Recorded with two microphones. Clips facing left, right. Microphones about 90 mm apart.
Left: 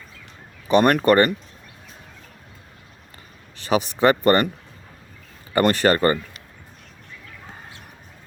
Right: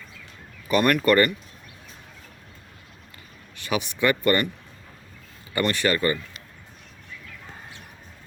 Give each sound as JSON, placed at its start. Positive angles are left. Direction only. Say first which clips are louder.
{"t": 0.7, "sound": "speech", "louder": "left 4 dB", "side_deg": 40}
{"t": 3.6, "sound": "speech", "louder": "left 6 dB", "side_deg": 35}
{"t": 5.5, "sound": "speech", "louder": "left 6 dB", "side_deg": 40}